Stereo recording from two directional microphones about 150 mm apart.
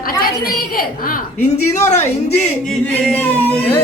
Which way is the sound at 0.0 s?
80° left.